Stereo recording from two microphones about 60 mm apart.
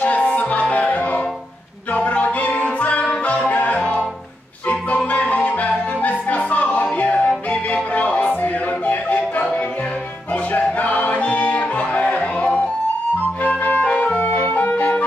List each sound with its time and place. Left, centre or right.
0.0 s music: left
14.2 s music: left